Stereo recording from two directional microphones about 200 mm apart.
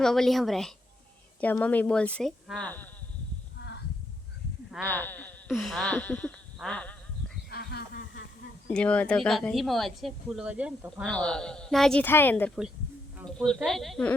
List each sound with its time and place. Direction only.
0.0 s a woman's voice: centre (ahead or behind)
4.8 s a woman's voice: 10° left (ahead or behind)
7.5 s a sound: 50° left (ahead or behind)
8.7 s speech: 5° left (ahead or behind)
11.0 s speech: 5° left (ahead or behind)